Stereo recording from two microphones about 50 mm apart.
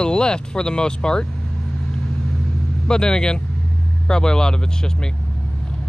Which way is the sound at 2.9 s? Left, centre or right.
Centre.